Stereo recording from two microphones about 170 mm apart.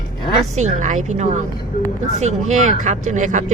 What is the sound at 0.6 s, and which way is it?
Speech, 45° right (ahead or behind).